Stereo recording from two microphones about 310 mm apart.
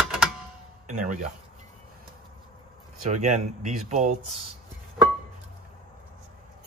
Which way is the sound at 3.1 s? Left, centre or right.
Right.